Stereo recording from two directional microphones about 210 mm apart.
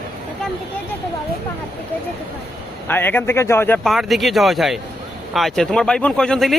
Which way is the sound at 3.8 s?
Centre (ahead or behind).